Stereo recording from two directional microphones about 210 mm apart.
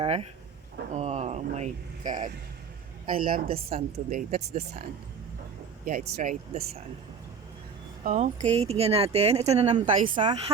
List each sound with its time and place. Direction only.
0.0 s a woman's voice: 25° right (ahead or behind)
5.8 s speech: 35° right (ahead or behind)
8.0 s speech: 35° right (ahead or behind)